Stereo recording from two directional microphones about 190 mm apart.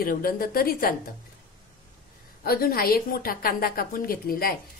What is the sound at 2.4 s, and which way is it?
A woman's voice, 50° left (ahead or behind).